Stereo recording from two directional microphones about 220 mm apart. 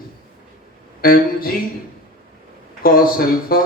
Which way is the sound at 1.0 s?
40° left (ahead or behind).